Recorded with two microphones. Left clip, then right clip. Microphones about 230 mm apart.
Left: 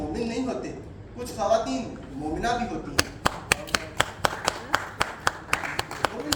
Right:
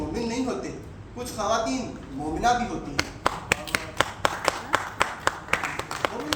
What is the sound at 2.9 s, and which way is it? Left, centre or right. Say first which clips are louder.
Tap: left 2 dB; left.